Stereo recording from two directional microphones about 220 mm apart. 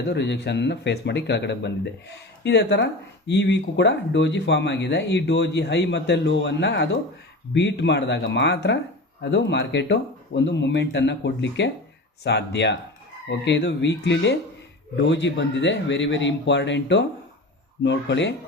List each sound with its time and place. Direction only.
0.1 s speech: 50° left (ahead or behind)